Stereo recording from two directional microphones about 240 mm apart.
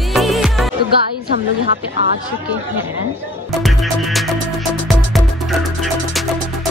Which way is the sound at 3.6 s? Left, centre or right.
Centre.